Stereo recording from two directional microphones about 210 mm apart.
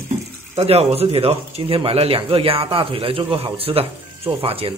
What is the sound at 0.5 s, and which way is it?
Speech, 30° right (ahead or behind).